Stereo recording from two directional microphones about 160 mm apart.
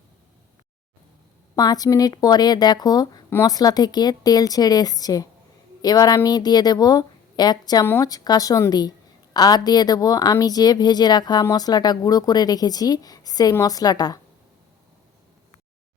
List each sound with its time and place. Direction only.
1.5 s a woman's voice: 25° left (ahead or behind)